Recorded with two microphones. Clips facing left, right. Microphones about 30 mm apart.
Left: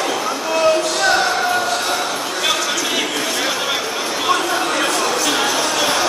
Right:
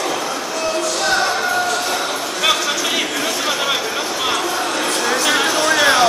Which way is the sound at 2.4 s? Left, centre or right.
Centre.